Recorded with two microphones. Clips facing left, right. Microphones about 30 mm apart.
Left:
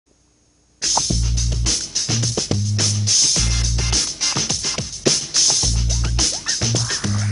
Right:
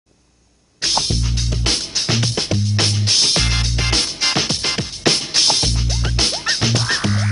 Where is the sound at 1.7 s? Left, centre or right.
Right.